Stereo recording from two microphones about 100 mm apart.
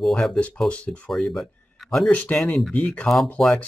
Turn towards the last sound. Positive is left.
turn(degrees=10)  # may be behind; listen again after turning